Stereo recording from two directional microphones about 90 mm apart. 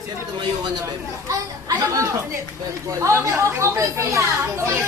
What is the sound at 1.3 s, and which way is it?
Speech, 40° right (ahead or behind).